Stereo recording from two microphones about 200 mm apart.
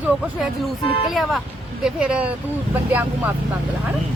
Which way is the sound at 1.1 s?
Centre (ahead or behind).